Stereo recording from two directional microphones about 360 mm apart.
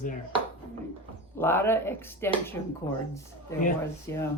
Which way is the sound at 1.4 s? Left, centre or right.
Centre.